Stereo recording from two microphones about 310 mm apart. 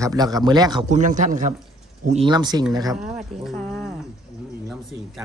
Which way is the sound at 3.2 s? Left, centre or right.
Centre.